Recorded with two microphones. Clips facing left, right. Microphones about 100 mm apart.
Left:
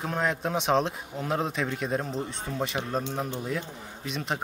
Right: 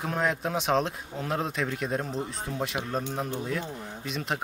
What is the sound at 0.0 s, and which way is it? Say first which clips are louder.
A man's voice: even; centre (ahead or behind).